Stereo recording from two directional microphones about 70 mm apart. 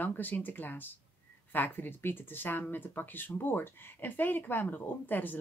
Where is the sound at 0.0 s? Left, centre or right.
Left.